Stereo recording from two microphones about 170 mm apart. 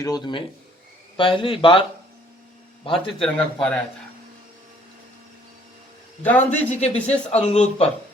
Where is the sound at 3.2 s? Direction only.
5° left (ahead or behind).